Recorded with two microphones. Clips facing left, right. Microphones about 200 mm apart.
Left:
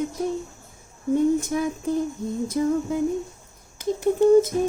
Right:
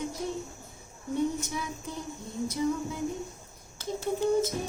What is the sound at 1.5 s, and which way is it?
A woman's voice, 50° left (ahead or behind).